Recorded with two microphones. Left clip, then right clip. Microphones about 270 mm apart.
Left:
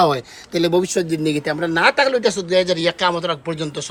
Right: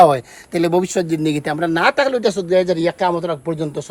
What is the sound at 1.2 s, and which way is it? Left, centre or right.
Speech, right.